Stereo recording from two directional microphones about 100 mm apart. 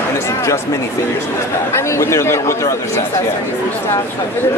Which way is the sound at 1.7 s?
30° left (ahead or behind).